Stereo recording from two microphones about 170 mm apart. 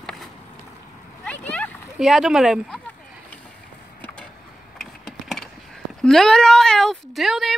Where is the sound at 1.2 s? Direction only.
10° left (ahead or behind).